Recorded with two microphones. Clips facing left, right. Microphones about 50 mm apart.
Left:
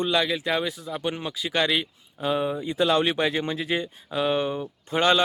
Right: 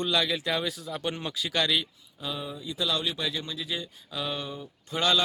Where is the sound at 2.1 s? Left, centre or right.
Left.